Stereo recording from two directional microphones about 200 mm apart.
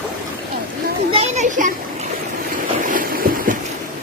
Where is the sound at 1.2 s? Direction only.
40° right (ahead or behind).